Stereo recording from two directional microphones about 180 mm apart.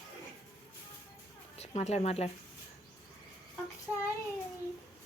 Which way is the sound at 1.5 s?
35° left (ahead or behind).